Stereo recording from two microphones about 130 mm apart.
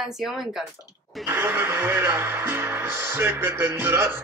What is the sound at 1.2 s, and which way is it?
Speech, 20° right (ahead or behind).